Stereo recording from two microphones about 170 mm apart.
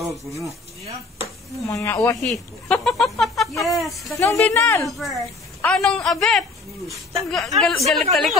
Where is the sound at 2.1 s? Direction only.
Centre (ahead or behind).